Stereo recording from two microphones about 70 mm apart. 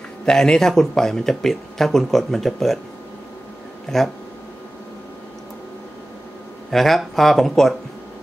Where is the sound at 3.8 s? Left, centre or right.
Centre.